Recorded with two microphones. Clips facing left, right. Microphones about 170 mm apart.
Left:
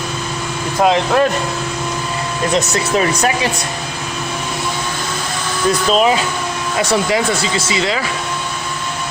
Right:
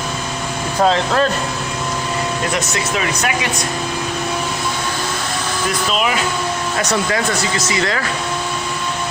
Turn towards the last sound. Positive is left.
turn(degrees=20)  # may be behind; listen again after turning